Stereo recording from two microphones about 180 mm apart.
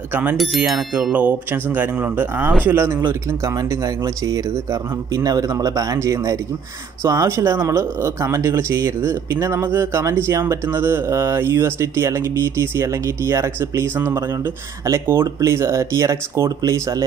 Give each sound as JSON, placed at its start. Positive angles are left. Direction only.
{"t": 0.1, "sound": "speech", "side_deg": -10}